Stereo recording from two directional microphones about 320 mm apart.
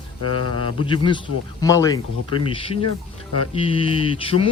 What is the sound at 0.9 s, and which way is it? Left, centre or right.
Speech, centre.